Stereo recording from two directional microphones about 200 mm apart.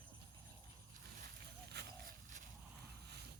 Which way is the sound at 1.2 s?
55° right (ahead or behind).